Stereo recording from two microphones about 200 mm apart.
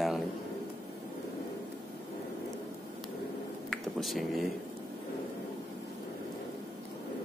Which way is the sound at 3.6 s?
Centre (ahead or behind).